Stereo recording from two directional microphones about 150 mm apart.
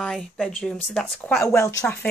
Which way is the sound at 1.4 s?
20° left (ahead or behind).